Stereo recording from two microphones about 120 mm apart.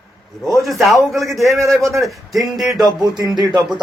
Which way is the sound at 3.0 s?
35° right (ahead or behind).